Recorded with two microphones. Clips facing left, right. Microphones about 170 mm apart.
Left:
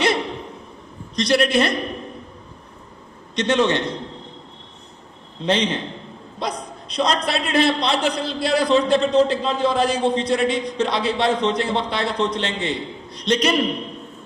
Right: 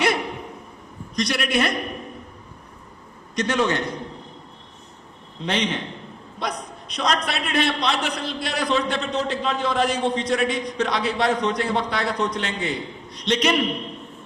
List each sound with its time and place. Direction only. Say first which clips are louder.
0.0 s a sound: left 2 dB; 25° left (ahead or behind)
1.1 s a woman's voice: left 5 dB; 30° left (ahead or behind)
3.3 s a man's voice: left 3 dB; 25° left (ahead or behind)
5.4 s a man's voice: left 4 dB; 30° left (ahead or behind)